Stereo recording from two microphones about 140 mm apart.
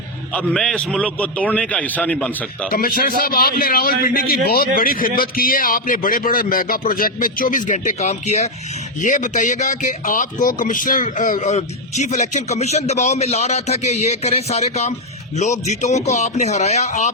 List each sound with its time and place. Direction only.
0.3 s a man's voice: 5° left (ahead or behind)
2.6 s a man's voice: 90° left; by 17.1 s 55° left (ahead or behind)